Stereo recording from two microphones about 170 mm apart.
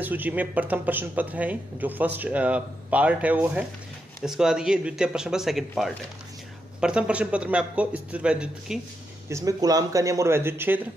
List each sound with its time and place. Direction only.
0.0 s speech: 10° right (ahead or behind)
9.3 s speech: 20° right (ahead or behind)